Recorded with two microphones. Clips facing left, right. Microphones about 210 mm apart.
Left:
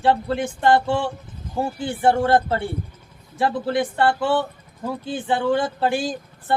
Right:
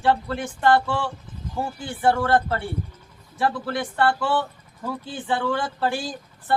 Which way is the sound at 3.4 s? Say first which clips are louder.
Left 4 dB; 20° left (ahead or behind).